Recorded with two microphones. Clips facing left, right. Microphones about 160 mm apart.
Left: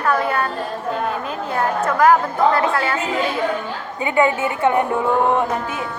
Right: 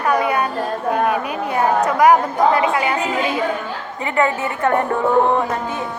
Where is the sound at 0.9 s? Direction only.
70° right (ahead or behind).